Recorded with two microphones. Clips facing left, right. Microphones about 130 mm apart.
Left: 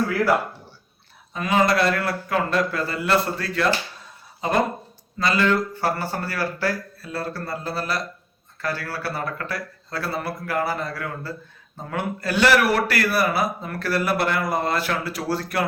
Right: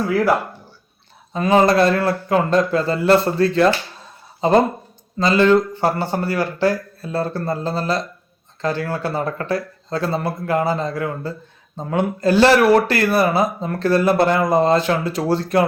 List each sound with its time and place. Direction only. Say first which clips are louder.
1.3 s a man's voice: right 6 dB; 30° right (ahead or behind)